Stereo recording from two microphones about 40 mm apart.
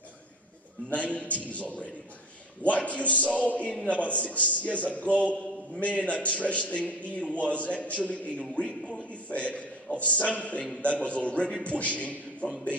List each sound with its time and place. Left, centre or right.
0.8 s a man's voice: left